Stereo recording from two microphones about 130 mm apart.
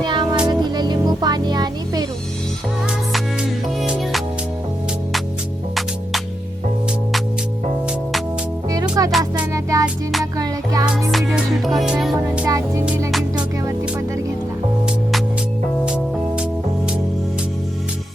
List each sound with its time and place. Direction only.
0.0 s music: 35° right (ahead or behind)
3.8 s music: centre (ahead or behind)
5.7 s music: centre (ahead or behind)
8.7 s music: 30° right (ahead or behind)
9.1 s music: 10° right (ahead or behind)
9.5 s music: 25° right (ahead or behind)
9.8 s music: centre (ahead or behind)
10.3 s music: 25° right (ahead or behind)
11.1 s music: centre (ahead or behind)
12.5 s music: 25° right (ahead or behind)
13.1 s music: centre (ahead or behind)
15.9 s music: 5° right (ahead or behind)